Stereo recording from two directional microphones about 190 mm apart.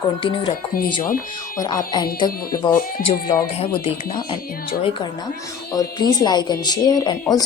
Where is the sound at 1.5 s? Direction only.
20° left (ahead or behind).